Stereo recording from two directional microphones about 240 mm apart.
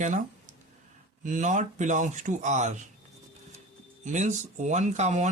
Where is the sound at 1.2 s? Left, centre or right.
Right.